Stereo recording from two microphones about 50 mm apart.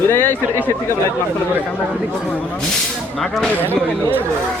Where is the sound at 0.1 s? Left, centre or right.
Left.